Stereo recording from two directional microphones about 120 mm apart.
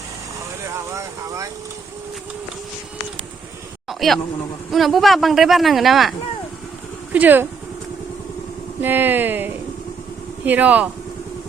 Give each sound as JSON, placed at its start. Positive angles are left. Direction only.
{"t": 0.9, "sound": "speech", "side_deg": -25}
{"t": 3.8, "sound": "insect", "side_deg": 0}
{"t": 4.7, "sound": "speech", "side_deg": 0}
{"t": 7.1, "sound": "speech", "side_deg": -15}
{"t": 8.8, "sound": "speech", "side_deg": -15}